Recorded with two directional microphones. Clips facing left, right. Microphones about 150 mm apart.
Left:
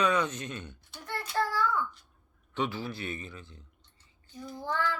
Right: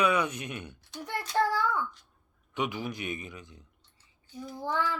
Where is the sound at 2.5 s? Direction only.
15° right (ahead or behind).